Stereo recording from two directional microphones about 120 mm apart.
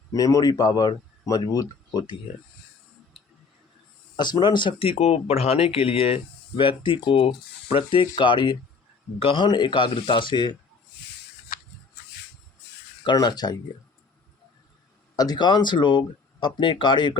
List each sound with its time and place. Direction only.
0.1 s speech: 30° left (ahead or behind)
4.2 s speech: 40° left (ahead or behind)
13.1 s speech: 35° left (ahead or behind)
15.1 s speech: 30° left (ahead or behind)